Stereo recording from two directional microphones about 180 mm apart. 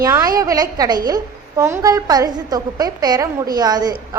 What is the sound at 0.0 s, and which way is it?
A woman's voice, 20° right (ahead or behind).